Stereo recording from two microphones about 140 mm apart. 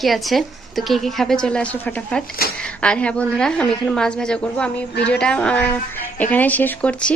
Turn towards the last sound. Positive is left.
turn(degrees=10)  # may be behind; listen again after turning